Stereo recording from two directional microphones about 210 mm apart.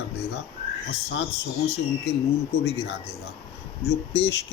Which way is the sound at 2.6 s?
50° left (ahead or behind).